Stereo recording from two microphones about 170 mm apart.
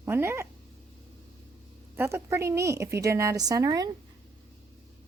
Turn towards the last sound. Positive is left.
turn(degrees=-20)  # may be behind; listen again after turning